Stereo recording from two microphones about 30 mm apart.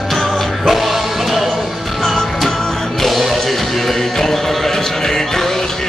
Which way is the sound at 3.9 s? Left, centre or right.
Centre.